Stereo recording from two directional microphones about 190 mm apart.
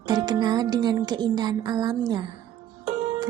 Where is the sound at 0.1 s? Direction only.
20° right (ahead or behind).